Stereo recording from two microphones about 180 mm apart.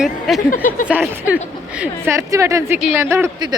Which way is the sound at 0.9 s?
10° right (ahead or behind).